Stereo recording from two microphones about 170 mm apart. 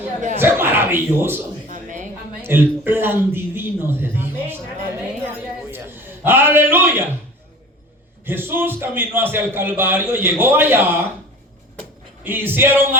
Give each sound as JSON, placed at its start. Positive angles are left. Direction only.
{"t": 0.3, "sound": "a man's voice", "side_deg": -15}
{"t": 1.6, "sound": "a sound", "side_deg": -50}
{"t": 2.4, "sound": "a man's voice", "side_deg": -15}
{"t": 5.7, "sound": "a sound", "side_deg": -15}
{"t": 8.2, "sound": "a man's voice", "side_deg": -15}
{"t": 12.2, "sound": "a man's voice", "side_deg": -10}